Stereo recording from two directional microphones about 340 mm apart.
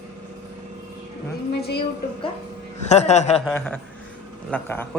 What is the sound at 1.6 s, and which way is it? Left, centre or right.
Speech, left.